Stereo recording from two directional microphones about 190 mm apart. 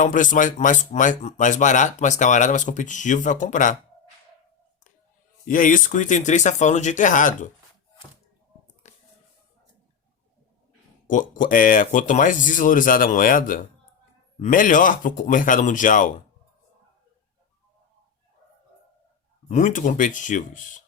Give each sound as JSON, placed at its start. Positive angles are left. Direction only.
{"t": 0.0, "sound": "speech", "side_deg": 45}
{"t": 5.5, "sound": "speech", "side_deg": 45}
{"t": 8.8, "sound": "a sound", "side_deg": 35}
{"t": 11.0, "sound": "speech", "side_deg": 45}
{"t": 19.5, "sound": "speech", "side_deg": 40}